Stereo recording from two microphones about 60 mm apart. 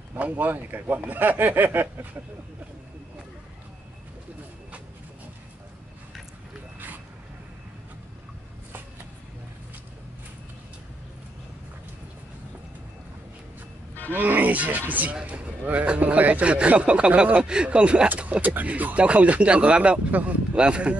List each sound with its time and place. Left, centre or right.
0.1 s speech: right
14.1 s speech: right